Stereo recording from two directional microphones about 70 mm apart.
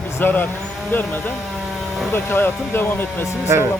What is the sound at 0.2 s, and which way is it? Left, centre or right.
Speech, left.